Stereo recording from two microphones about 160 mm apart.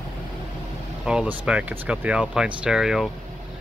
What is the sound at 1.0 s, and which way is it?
Speech, 5° right (ahead or behind).